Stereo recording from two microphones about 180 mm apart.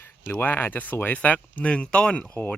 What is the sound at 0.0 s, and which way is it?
Speech, 10° left (ahead or behind).